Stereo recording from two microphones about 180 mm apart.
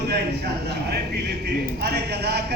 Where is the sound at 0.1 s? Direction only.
65° right (ahead or behind).